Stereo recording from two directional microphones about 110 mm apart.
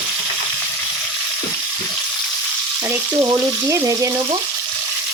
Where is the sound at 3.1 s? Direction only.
30° right (ahead or behind).